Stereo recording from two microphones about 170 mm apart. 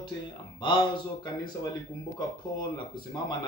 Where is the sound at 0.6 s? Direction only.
25° left (ahead or behind).